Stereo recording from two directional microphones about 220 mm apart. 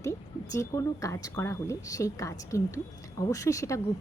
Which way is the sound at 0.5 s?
15° left (ahead or behind).